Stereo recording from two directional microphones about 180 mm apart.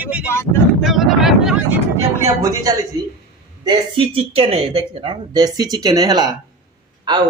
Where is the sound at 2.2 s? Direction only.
20° right (ahead or behind).